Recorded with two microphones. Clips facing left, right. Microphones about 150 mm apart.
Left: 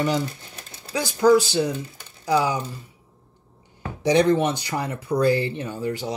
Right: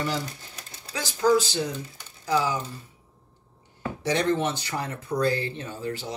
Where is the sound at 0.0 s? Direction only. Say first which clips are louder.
Left 6 dB; 20° left (ahead or behind).